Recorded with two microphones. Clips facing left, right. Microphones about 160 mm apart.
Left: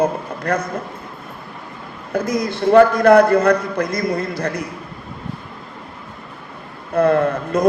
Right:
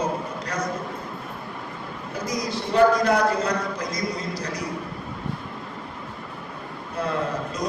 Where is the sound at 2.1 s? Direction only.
55° left (ahead or behind).